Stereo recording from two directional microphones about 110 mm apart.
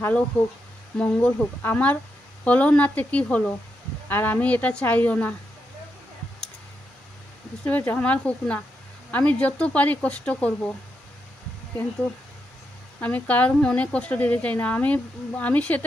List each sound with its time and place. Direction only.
0.9 s speech: 10° left (ahead or behind)
7.6 s speech: 15° left (ahead or behind)
13.0 s speech: 15° left (ahead or behind)